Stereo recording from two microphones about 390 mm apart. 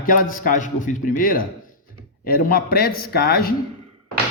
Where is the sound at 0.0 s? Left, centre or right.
Left.